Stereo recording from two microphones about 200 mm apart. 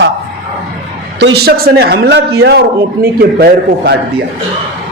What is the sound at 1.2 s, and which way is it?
A man's voice, 55° right (ahead or behind).